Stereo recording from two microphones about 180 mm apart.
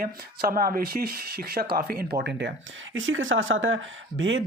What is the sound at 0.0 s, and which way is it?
Speech, 55° right (ahead or behind).